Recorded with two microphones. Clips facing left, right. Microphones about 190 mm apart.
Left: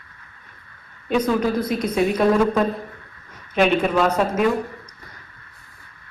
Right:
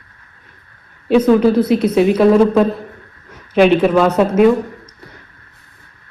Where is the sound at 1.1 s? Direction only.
30° right (ahead or behind).